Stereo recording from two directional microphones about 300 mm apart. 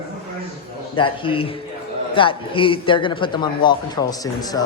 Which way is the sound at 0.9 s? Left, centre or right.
Centre.